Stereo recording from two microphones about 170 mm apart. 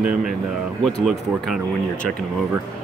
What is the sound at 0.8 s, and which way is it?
Speech, centre (ahead or behind).